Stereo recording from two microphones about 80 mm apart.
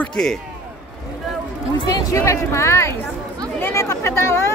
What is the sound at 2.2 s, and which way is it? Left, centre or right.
Speech, left.